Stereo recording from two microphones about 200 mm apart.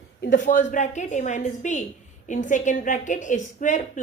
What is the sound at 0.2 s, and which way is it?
A woman's voice, 40° left (ahead or behind).